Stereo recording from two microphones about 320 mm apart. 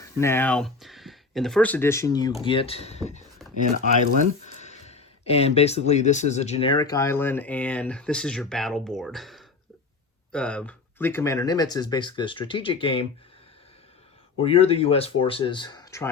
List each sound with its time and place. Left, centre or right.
0.0 s speech: centre
4.6 s speech: left
14.3 s speech: centre